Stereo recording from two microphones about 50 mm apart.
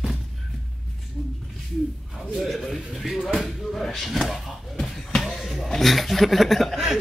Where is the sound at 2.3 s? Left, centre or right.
Centre.